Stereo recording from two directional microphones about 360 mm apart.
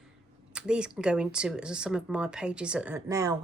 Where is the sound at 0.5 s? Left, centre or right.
Centre.